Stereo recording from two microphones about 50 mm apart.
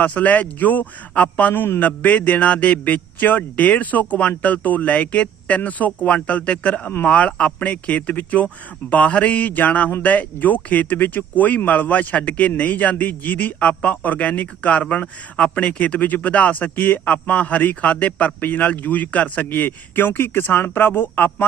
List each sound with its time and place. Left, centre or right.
0.0 s speech: left